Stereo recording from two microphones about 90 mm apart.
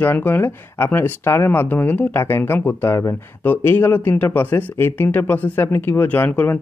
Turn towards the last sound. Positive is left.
turn(degrees=20)  # may be behind; listen again after turning